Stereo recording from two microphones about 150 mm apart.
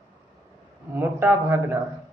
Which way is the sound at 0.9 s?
10° right (ahead or behind).